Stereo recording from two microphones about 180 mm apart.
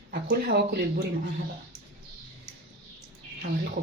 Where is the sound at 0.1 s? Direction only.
65° right (ahead or behind).